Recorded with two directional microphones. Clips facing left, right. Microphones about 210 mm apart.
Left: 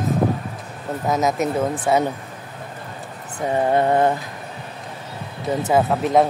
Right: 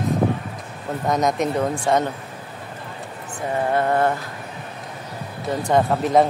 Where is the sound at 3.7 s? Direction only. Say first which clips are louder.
Left 2 dB; 20° left (ahead or behind).